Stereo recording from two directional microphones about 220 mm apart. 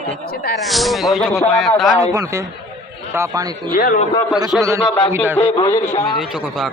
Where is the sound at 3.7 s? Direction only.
40° left (ahead or behind).